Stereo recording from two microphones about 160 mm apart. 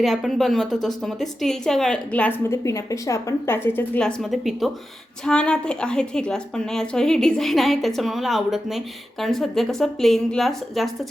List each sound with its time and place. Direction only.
0.0 s a woman's voice: centre (ahead or behind)
2.5 s a woman's voice: 20° left (ahead or behind)
4.0 s a woman's voice: centre (ahead or behind)